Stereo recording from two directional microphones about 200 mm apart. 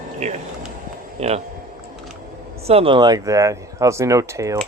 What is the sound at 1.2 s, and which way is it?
Speech, 30° right (ahead or behind).